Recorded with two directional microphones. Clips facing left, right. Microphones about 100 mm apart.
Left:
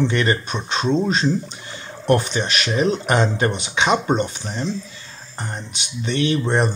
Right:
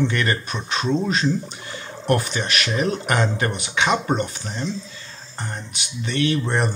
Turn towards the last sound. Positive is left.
turn(degrees=20)  # may be behind; listen again after turning